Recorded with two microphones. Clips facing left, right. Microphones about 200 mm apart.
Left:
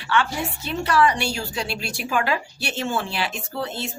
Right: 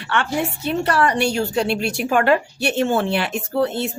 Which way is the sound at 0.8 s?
35° right (ahead or behind).